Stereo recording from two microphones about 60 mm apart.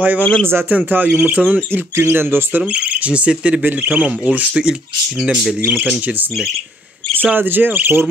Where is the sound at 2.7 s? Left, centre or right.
Right.